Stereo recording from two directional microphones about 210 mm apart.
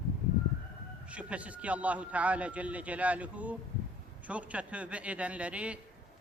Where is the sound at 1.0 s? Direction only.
5° right (ahead or behind).